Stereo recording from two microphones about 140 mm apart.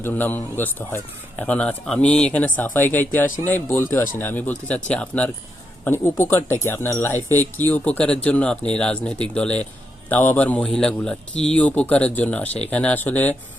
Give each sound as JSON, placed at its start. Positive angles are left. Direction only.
{"t": 0.0, "sound": "speech", "side_deg": 15}